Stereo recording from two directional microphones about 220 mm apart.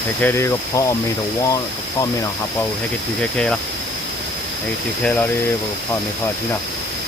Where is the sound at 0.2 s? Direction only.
10° left (ahead or behind).